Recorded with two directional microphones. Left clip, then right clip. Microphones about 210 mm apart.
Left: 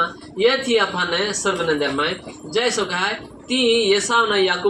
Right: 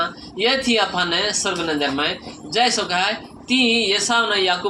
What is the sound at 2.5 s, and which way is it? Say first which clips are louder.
Speech: right 2 dB; 50° right (ahead or behind).